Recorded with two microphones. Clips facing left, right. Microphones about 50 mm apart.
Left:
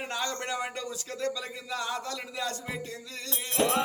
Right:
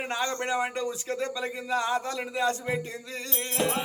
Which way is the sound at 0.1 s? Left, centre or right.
Right.